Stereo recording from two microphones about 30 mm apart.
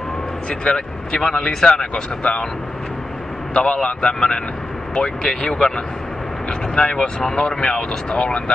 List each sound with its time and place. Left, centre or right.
0.7 s speech: left
1.8 s a man's voice: left
3.5 s a man's voice: left; by 5.7 s centre
6.7 s a man's voice: left